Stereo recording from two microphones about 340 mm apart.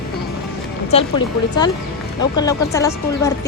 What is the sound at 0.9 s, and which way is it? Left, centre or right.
Speech, centre.